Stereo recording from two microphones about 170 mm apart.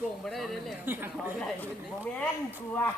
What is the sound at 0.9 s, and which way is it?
Speech, 10° right (ahead or behind).